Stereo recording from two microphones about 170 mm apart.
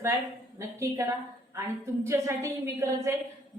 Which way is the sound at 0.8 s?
15° right (ahead or behind).